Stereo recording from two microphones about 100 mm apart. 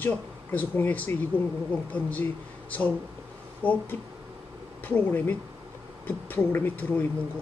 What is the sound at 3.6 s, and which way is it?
Speech, 15° left (ahead or behind).